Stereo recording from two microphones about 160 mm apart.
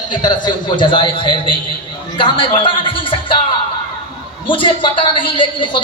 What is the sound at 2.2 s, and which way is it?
Music, 35° left (ahead or behind).